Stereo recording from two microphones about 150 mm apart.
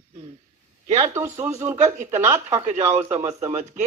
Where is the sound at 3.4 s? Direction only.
50° right (ahead or behind).